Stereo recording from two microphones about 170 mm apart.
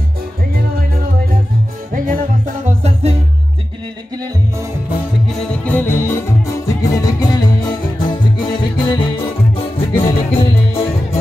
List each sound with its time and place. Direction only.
1.9 s music: 55° right (ahead or behind)
5.3 s music: 5° left (ahead or behind); by 11.1 s 35° left (ahead or behind)